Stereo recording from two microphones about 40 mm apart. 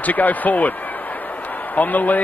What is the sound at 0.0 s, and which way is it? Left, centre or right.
Speech, left.